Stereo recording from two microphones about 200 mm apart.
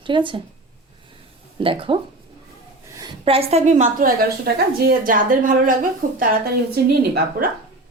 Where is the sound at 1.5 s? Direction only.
25° right (ahead or behind).